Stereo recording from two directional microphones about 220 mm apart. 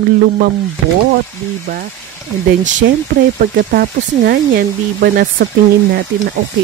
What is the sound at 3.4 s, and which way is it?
Speech, 40° right (ahead or behind).